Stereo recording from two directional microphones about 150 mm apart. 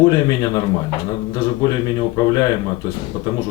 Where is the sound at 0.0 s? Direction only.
25° left (ahead or behind).